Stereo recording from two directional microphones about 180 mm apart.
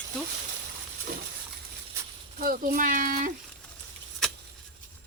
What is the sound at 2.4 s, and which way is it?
Speech, 50° right (ahead or behind).